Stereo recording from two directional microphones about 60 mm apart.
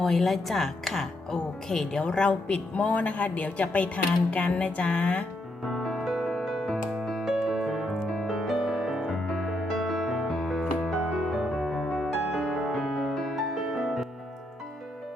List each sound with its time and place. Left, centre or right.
0.0 s speech: centre
5.6 s music: centre
7.9 s music: centre